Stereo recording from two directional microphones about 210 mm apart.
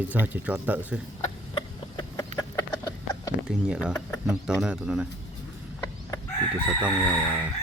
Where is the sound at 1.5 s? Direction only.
20° left (ahead or behind).